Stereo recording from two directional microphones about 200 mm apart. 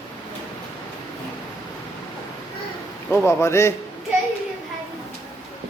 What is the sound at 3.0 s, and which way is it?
Speech, 15° left (ahead or behind).